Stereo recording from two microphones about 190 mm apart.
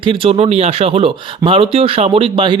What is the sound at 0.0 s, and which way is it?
A man's voice, 30° right (ahead or behind).